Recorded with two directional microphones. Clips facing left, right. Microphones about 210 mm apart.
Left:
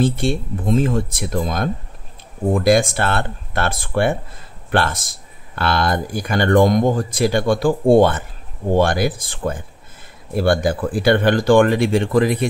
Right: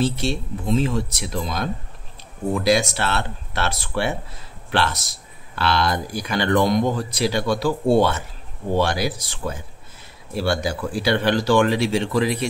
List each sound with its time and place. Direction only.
0.0 s speech: 50° left (ahead or behind)